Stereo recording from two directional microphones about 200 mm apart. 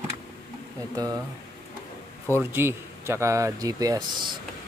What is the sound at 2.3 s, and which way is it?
Speech, 10° right (ahead or behind).